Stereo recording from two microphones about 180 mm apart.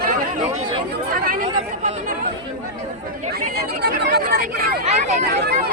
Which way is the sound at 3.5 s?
65° right (ahead or behind).